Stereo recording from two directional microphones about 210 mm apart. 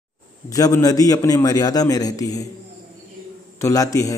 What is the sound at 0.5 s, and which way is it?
A man's voice, 15° left (ahead or behind).